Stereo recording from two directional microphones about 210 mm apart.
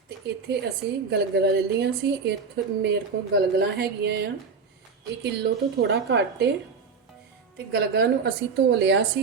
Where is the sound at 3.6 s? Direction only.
50° right (ahead or behind).